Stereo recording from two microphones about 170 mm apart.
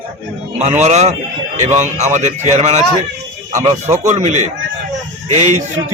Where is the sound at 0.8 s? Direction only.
40° right (ahead or behind).